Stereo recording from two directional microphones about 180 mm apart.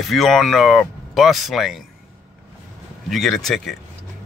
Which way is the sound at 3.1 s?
Centre (ahead or behind).